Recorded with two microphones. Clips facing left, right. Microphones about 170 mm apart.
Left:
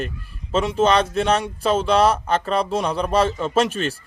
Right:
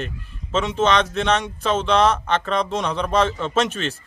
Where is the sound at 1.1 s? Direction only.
10° left (ahead or behind).